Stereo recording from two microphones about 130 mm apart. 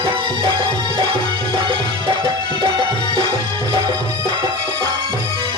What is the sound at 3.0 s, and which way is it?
Music, 35° left (ahead or behind).